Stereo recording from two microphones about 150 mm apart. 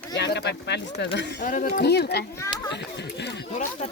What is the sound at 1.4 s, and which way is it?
Speech, 60° left (ahead or behind).